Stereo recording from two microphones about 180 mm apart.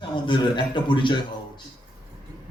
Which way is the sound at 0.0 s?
25° left (ahead or behind).